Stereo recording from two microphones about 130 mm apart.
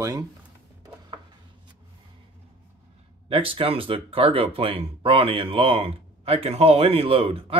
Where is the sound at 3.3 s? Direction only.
45° right (ahead or behind).